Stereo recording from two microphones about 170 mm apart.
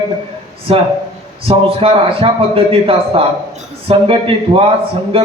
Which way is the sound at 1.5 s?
35° right (ahead or behind).